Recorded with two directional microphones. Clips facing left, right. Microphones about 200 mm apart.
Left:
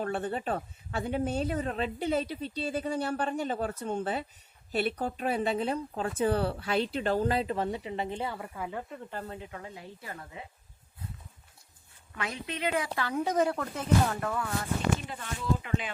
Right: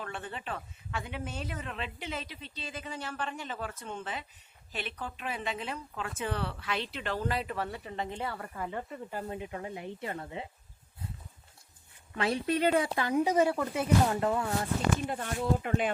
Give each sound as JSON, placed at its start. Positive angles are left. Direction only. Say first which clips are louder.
{"t": 0.0, "sound": "a woman's voice", "louder": "left 8 dB", "side_deg": 40}
{"t": 8.4, "sound": "speech", "louder": "even", "side_deg": 5}
{"t": 9.2, "sound": "speech", "louder": "right 3 dB", "side_deg": -20}
{"t": 12.1, "sound": "speech", "louder": "right 7 dB", "side_deg": -30}
{"t": 12.8, "sound": "speech", "louder": "right 3 dB", "side_deg": -15}
{"t": 14.1, "sound": "speech", "louder": "right 3 dB", "side_deg": -25}
{"t": 15.0, "sound": "speech", "louder": "right 2 dB", "side_deg": -50}